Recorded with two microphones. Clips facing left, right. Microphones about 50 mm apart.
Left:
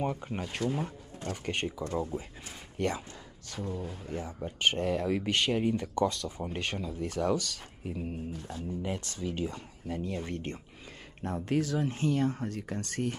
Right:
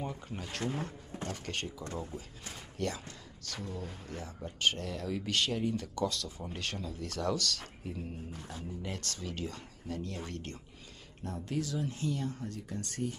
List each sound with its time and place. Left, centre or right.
0.0 s speech: left
3.5 s speech: centre
8.3 s speech: centre
8.8 s speech: centre
11.4 s speech: left